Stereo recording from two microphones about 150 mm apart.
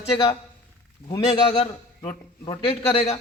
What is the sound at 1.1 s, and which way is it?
A man's voice, 30° left (ahead or behind).